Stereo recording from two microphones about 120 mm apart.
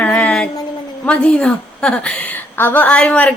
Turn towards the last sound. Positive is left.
turn(degrees=10)  # may be behind; listen again after turning